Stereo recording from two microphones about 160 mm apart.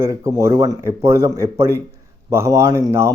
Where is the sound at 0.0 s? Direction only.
20° right (ahead or behind).